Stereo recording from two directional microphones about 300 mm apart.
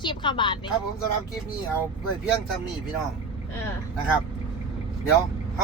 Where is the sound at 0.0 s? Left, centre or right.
Centre.